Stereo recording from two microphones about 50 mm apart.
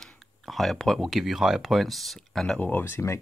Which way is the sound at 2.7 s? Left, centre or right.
Left.